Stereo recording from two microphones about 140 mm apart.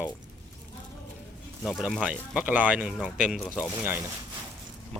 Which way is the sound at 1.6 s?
Centre (ahead or behind).